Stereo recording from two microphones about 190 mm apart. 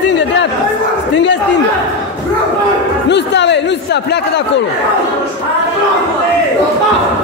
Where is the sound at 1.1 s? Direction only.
70° left (ahead or behind).